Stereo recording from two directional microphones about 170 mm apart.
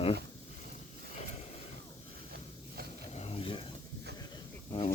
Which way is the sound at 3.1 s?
35° left (ahead or behind).